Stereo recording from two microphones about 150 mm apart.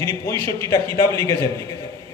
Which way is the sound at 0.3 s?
30° right (ahead or behind).